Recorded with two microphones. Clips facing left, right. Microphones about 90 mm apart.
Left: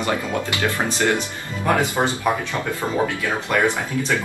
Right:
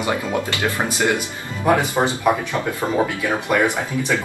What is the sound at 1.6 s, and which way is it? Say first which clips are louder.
Speech: right 2 dB; 15° right (ahead or behind).